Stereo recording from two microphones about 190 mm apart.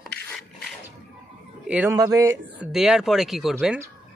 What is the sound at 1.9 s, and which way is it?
Speech, 20° right (ahead or behind).